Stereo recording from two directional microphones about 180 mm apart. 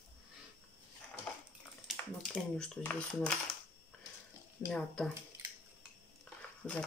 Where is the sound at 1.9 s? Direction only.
5° left (ahead or behind).